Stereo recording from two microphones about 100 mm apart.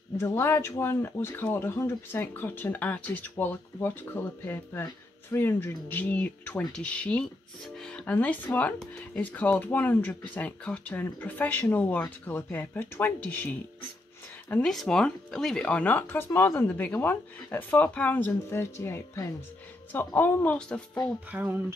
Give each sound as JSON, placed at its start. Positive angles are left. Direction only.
{"t": 0.2, "sound": "speech", "side_deg": 25}
{"t": 14.5, "sound": "speech", "side_deg": 5}
{"t": 20.5, "sound": "speech", "side_deg": 5}
{"t": 21.3, "sound": "speech", "side_deg": -15}